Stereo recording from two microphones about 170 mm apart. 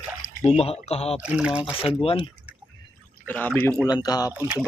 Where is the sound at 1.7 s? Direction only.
35° left (ahead or behind).